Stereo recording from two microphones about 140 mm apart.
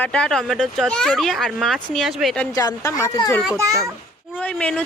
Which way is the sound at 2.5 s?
25° left (ahead or behind).